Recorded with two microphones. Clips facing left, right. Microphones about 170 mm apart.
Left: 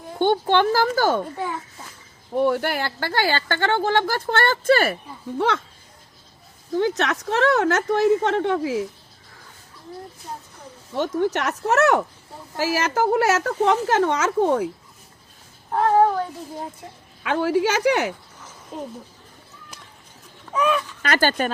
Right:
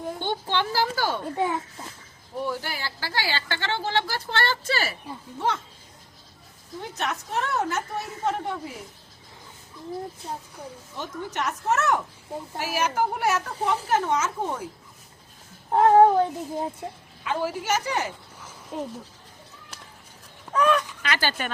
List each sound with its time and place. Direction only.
0.2 s speech: 50° left (ahead or behind)
2.3 s speech: 65° left (ahead or behind)
6.7 s speech: 90° left
10.9 s speech: 75° left (ahead or behind)
12.5 s speech: 90° left; by 14.7 s 70° left (ahead or behind)
15.7 s speech: 20° right (ahead or behind)
17.2 s speech: 75° left (ahead or behind)
18.3 s a sound: 10° right (ahead or behind)
20.5 s speech: 10° left (ahead or behind)
21.0 s speech: 45° left (ahead or behind)